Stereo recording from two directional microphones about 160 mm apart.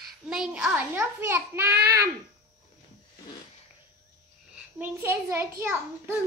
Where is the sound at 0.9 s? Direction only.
15° right (ahead or behind).